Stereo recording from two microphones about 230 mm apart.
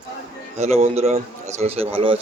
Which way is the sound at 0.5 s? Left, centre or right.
Right.